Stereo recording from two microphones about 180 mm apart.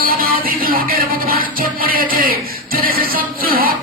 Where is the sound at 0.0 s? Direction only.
55° right (ahead or behind).